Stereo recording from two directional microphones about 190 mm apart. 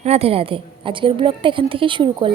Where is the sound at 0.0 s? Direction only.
30° right (ahead or behind).